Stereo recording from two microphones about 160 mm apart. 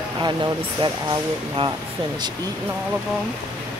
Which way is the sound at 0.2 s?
30° right (ahead or behind).